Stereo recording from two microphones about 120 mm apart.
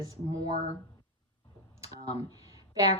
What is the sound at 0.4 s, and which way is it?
Speech, 55° left (ahead or behind).